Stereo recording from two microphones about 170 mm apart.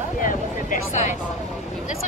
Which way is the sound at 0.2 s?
55° left (ahead or behind).